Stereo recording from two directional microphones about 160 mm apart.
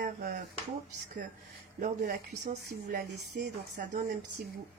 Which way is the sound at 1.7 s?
65° right (ahead or behind).